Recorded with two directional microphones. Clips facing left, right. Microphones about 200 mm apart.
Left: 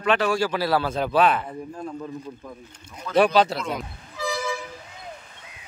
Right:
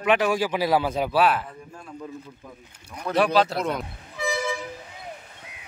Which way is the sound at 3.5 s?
60° right (ahead or behind).